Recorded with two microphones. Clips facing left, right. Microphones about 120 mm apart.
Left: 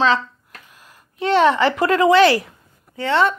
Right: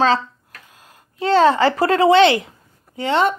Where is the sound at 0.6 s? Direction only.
25° right (ahead or behind).